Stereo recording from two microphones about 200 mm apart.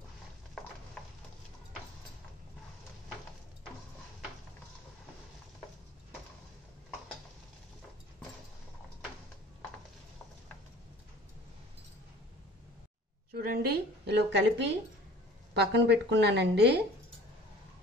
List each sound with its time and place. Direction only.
13.3 s a woman's voice: 50° right (ahead or behind)